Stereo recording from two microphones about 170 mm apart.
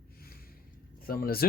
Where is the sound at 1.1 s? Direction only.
60° left (ahead or behind).